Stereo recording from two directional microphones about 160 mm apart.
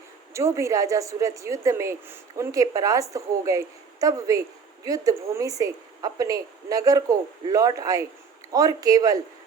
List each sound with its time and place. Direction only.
0.3 s a woman's voice: 20° right (ahead or behind)